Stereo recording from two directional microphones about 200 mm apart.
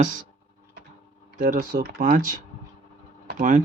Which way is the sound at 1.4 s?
45° right (ahead or behind).